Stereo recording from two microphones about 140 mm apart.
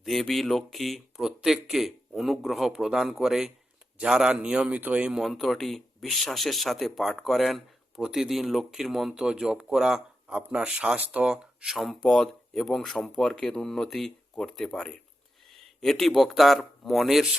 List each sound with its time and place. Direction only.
0.0 s a man's voice: centre (ahead or behind)